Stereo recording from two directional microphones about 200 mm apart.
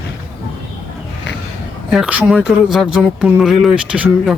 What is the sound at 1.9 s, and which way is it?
Speech, 5° right (ahead or behind).